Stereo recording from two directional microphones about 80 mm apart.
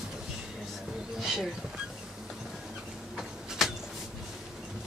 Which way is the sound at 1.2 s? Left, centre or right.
Centre.